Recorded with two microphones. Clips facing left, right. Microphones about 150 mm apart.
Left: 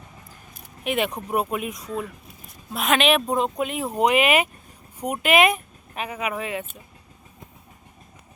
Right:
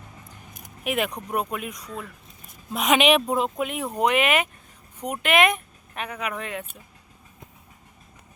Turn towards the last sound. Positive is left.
turn(degrees=5)  # may be behind; listen again after turning